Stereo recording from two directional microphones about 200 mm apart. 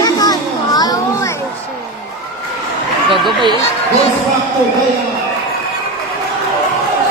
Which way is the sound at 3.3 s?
25° right (ahead or behind).